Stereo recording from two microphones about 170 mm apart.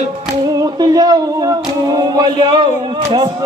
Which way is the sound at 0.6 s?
20° right (ahead or behind).